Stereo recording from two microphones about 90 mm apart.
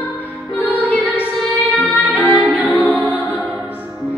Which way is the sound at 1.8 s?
20° left (ahead or behind).